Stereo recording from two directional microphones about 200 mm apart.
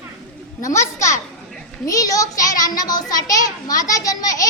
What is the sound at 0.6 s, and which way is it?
A child's voice, 15° left (ahead or behind).